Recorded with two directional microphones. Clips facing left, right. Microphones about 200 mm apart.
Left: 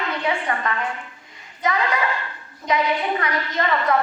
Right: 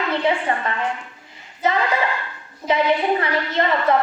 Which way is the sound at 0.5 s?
30° right (ahead or behind).